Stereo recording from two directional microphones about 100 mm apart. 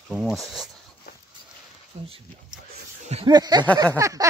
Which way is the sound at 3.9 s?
30° right (ahead or behind).